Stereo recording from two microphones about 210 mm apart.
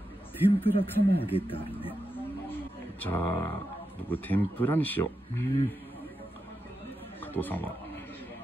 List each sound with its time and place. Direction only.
0.5 s speech: 25° left (ahead or behind)
2.5 s roaring cats: 10° left (ahead or behind)
4.1 s speech: 10° left (ahead or behind)
7.3 s speech: 10° left (ahead or behind)